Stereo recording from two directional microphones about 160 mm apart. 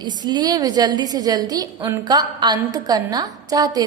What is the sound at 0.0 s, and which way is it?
A woman's voice, 25° right (ahead or behind).